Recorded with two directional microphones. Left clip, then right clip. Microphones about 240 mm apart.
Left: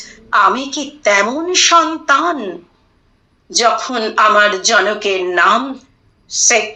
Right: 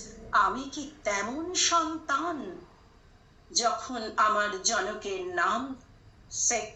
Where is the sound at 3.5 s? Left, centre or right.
Left.